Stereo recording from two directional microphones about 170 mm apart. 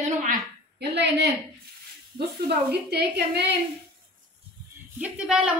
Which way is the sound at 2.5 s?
70° right (ahead or behind).